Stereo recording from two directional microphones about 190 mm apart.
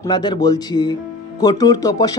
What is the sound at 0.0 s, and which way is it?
Speech, 25° left (ahead or behind).